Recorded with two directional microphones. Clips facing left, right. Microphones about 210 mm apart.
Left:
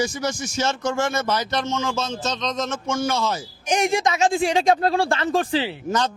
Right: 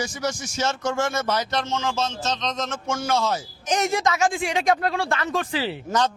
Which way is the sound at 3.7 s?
15° left (ahead or behind).